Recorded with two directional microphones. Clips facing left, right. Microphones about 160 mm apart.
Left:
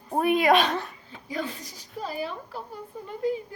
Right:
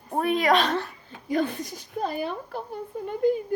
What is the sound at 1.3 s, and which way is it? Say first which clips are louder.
A woman's voice: right 7 dB; 55° right (ahead or behind).